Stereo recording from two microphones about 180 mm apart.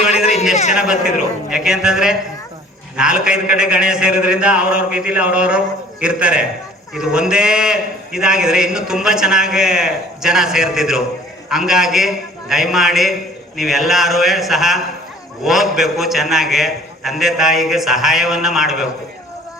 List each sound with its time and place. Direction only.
0.5 s a man's voice: 40° left (ahead or behind)
0.8 s a man's voice: 5° right (ahead or behind)